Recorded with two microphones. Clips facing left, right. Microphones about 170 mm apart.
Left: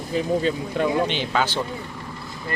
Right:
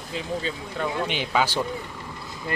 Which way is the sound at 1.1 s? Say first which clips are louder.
Left 1 dB; 10° right (ahead or behind).